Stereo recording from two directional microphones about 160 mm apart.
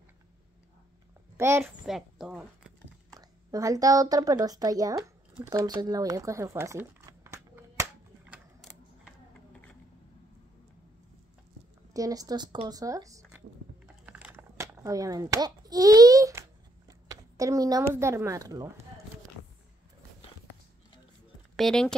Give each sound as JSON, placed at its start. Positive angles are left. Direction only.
{"t": 1.3, "sound": "a woman's voice", "side_deg": -15}
{"t": 1.9, "sound": "speech", "side_deg": 0}
{"t": 3.2, "sound": "speech", "side_deg": -20}
{"t": 8.3, "sound": "typing", "side_deg": -5}
{"t": 11.9, "sound": "speech", "side_deg": -20}
{"t": 14.0, "sound": "a sound", "side_deg": -10}
{"t": 21.5, "sound": "speech", "side_deg": 5}